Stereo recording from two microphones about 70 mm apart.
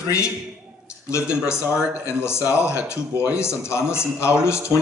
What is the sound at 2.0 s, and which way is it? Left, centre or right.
Speech, left.